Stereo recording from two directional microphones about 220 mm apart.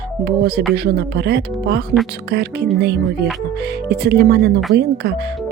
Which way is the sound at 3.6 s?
50° right (ahead or behind).